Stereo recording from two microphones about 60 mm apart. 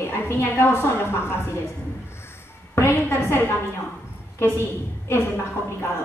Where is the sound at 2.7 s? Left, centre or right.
Left.